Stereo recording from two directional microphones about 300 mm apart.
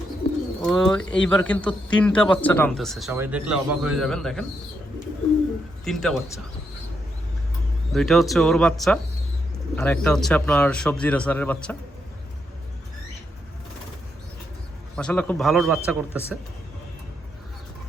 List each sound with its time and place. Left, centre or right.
0.6 s speech: centre
5.8 s speech: centre
7.9 s speech: centre
14.9 s speech: centre